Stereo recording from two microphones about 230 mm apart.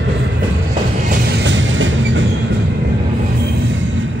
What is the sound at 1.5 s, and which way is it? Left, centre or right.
Train, right.